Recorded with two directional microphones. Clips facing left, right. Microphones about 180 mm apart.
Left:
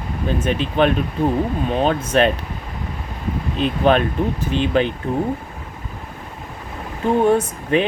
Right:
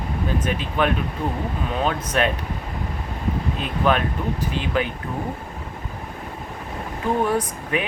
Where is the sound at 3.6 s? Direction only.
25° left (ahead or behind).